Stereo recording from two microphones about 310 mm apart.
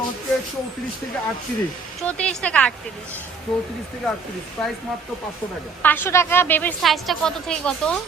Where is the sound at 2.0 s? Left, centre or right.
Centre.